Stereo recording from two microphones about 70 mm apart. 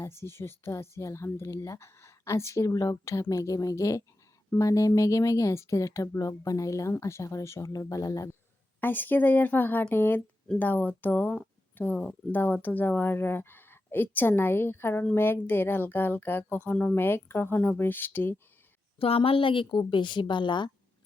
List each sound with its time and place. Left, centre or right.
0.0 s speech: left
8.8 s a woman's voice: left
19.7 s a woman's voice: left